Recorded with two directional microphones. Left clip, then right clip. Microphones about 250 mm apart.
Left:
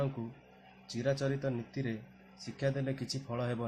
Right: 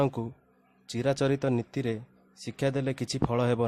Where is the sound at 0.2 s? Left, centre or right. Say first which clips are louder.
Right 8 dB; right.